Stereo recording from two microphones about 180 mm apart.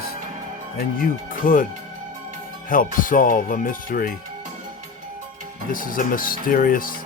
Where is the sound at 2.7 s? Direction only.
50° left (ahead or behind).